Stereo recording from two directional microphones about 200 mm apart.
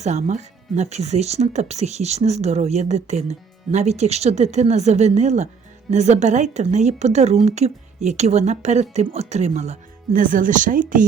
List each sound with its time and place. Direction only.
0.0 s speech: 35° right (ahead or behind)